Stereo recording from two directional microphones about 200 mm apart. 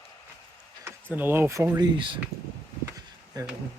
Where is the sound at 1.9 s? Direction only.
25° right (ahead or behind).